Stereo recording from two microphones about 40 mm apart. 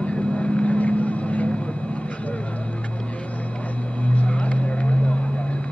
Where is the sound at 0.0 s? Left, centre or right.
Left.